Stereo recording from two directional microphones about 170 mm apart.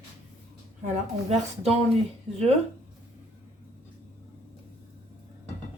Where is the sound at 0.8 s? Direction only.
40° right (ahead or behind).